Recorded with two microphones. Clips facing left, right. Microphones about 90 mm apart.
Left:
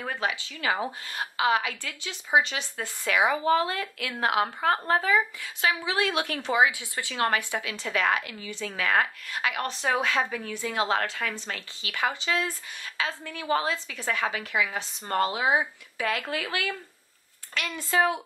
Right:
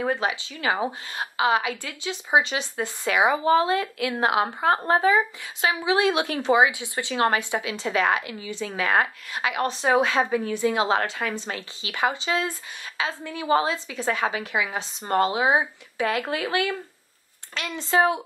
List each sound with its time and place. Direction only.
0.0 s a woman's voice: 20° right (ahead or behind)